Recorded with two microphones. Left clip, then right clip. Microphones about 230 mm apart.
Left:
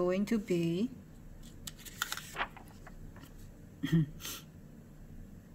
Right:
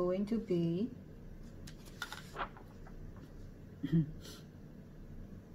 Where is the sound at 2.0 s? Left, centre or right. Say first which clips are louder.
Left 5 dB; left.